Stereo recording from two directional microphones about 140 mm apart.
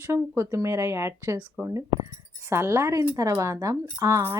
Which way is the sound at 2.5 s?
20° right (ahead or behind).